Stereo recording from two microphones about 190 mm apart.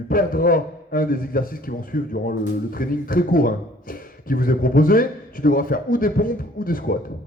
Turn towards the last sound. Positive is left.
turn(degrees=50)  # may be behind; listen again after turning